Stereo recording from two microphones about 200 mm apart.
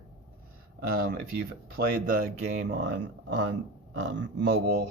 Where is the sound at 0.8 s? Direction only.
50° right (ahead or behind).